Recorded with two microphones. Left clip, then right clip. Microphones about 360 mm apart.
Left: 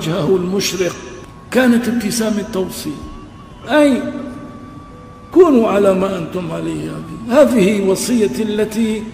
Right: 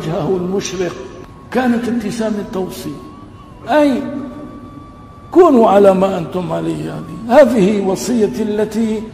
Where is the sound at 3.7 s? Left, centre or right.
Centre.